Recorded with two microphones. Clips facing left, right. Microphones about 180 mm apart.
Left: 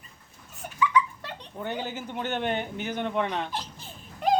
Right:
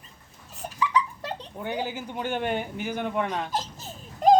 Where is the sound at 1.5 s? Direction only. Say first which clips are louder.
Right 1 dB; 10° right (ahead or behind).